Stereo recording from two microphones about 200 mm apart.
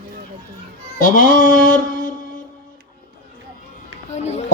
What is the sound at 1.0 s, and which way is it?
Music, 45° left (ahead or behind).